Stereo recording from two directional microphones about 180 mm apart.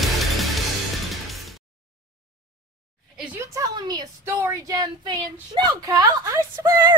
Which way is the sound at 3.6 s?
20° right (ahead or behind).